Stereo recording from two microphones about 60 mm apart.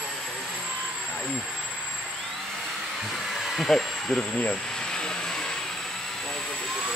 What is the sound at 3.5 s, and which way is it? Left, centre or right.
Speech, centre.